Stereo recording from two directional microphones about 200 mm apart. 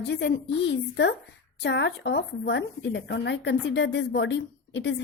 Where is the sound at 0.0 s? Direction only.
60° left (ahead or behind).